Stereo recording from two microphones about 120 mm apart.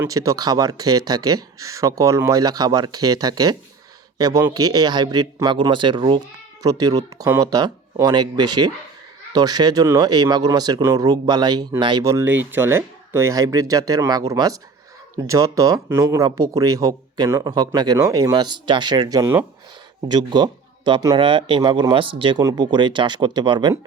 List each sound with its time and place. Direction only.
0.1 s speech: 30° right (ahead or behind)
12.0 s speech: 25° right (ahead or behind); by 23.7 s 40° right (ahead or behind)